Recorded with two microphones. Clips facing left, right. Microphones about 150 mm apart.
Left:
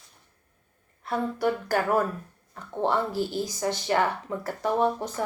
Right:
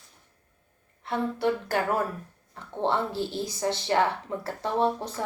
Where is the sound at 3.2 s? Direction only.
25° right (ahead or behind).